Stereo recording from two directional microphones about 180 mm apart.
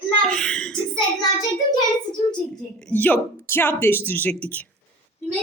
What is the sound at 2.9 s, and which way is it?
Speech, 10° left (ahead or behind).